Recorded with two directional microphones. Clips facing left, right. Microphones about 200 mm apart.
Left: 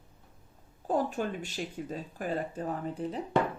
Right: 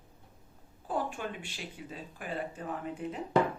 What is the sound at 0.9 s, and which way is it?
Speech, 40° left (ahead or behind).